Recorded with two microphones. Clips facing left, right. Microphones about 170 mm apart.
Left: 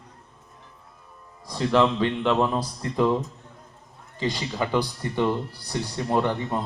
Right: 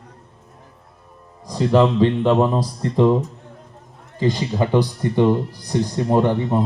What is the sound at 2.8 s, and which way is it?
Speech, 30° right (ahead or behind).